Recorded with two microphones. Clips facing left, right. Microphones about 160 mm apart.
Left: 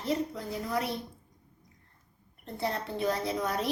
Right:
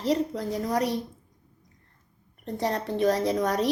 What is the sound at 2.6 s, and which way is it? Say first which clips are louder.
Speech: right 6 dB; 40° right (ahead or behind).